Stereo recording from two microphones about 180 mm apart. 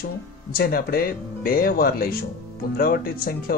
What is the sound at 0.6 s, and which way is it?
Speech, 55° left (ahead or behind).